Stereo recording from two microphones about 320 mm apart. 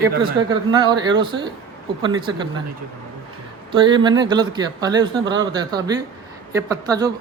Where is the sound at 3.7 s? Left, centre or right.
Centre.